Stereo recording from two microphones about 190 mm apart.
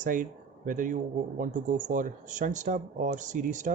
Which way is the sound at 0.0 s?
45° right (ahead or behind).